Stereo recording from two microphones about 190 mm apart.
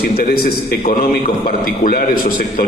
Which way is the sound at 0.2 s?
50° left (ahead or behind).